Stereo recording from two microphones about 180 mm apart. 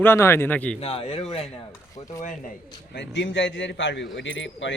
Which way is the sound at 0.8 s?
35° left (ahead or behind).